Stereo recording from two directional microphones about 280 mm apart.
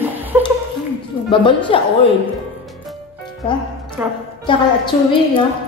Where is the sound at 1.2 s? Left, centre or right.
Centre.